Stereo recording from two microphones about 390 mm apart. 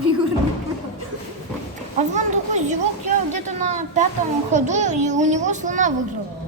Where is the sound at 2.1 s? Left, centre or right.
Centre.